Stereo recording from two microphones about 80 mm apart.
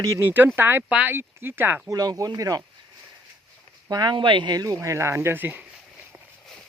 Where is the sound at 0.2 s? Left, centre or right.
Right.